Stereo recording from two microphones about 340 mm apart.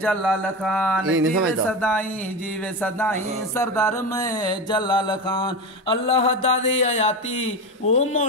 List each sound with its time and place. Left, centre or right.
0.0 s mantra: centre
1.0 s speech: right
1.7 s mantra: centre